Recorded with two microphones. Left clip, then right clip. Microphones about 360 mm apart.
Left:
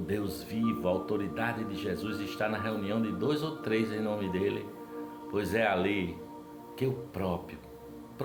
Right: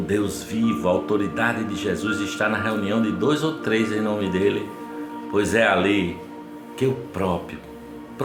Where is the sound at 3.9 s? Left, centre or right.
Left.